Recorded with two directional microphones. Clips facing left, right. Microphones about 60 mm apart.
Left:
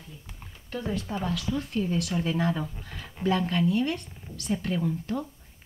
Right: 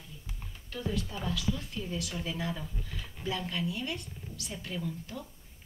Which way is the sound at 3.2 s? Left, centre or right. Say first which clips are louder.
Left 9 dB; left.